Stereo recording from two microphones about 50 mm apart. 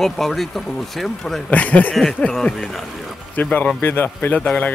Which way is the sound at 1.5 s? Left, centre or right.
Left.